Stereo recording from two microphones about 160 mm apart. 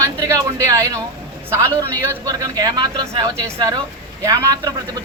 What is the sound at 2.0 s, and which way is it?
A woman's voice, 15° right (ahead or behind).